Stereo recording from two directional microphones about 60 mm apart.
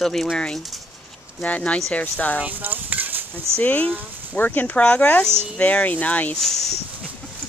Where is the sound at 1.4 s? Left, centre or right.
Left.